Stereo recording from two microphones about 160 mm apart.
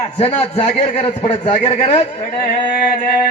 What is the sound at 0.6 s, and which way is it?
A man's voice, 50° left (ahead or behind).